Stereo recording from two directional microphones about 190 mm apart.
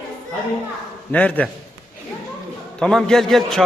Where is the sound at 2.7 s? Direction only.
5° left (ahead or behind).